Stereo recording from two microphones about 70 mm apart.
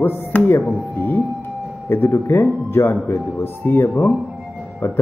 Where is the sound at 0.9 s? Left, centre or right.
Left.